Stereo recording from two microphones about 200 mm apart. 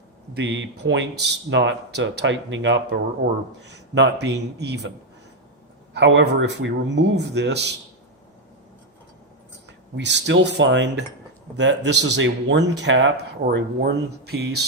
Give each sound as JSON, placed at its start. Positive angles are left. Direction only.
{"t": 0.3, "sound": "speech", "side_deg": -60}
{"t": 5.9, "sound": "speech", "side_deg": -60}
{"t": 9.9, "sound": "speech", "side_deg": -60}
{"t": 13.4, "sound": "speech", "side_deg": -50}